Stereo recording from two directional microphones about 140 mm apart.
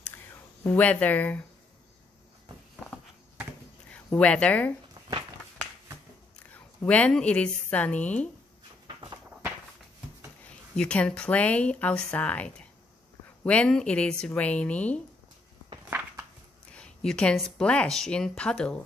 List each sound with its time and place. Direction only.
0.1 s a sound: 20° left (ahead or behind)
0.7 s speech: 10° left (ahead or behind)
3.9 s speech: 10° left (ahead or behind)
6.5 s speech: 10° left (ahead or behind)
8.8 s walk: 35° right (ahead or behind)
10.8 s speech: 10° left (ahead or behind)
16.7 s speech: 5° left (ahead or behind)